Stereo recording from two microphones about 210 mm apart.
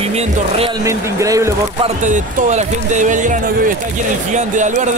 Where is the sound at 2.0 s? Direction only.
35° right (ahead or behind).